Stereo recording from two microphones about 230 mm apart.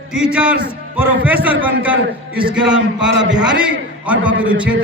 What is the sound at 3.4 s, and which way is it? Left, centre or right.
A man's voice, centre.